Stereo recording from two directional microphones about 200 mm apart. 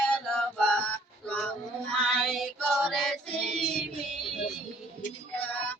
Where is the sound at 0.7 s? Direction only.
5° left (ahead or behind).